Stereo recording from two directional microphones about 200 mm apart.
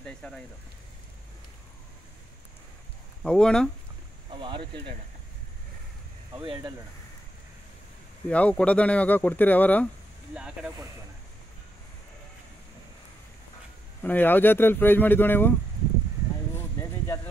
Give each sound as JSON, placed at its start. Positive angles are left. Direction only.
{"t": 0.0, "sound": "speech", "side_deg": 5}
{"t": 3.2, "sound": "speech", "side_deg": 5}
{"t": 4.3, "sound": "speech", "side_deg": -25}
{"t": 6.4, "sound": "speech", "side_deg": -25}
{"t": 8.3, "sound": "speech", "side_deg": 5}
{"t": 10.3, "sound": "speech", "side_deg": -5}
{"t": 14.0, "sound": "speech", "side_deg": 10}